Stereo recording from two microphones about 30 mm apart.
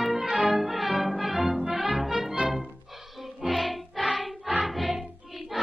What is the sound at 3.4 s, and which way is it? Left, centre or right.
Music, centre.